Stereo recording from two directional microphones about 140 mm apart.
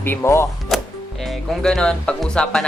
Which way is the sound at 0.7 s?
Centre (ahead or behind).